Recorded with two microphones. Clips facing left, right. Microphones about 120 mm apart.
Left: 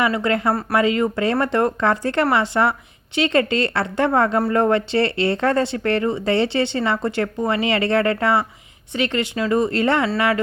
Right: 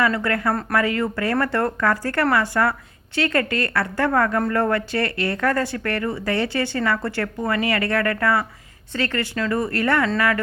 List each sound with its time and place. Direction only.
0.0 s speech: 20° left (ahead or behind)